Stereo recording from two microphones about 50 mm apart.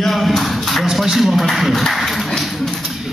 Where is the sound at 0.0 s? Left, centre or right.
Centre.